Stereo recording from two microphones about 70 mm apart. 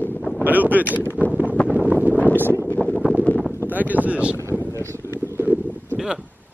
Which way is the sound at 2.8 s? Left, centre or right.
Centre.